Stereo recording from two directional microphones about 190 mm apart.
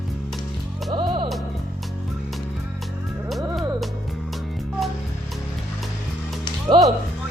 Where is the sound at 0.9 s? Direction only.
25° right (ahead or behind).